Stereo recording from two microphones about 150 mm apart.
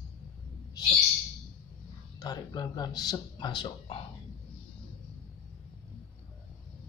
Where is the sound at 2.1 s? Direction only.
25° left (ahead or behind).